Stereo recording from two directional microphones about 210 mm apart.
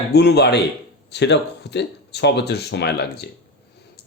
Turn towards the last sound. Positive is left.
turn(degrees=50)  # may be behind; listen again after turning